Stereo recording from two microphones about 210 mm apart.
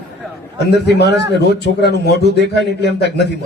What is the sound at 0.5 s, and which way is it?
A man's voice, 55° left (ahead or behind).